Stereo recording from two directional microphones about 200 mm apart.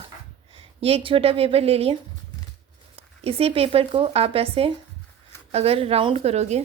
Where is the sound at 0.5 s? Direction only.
30° right (ahead or behind).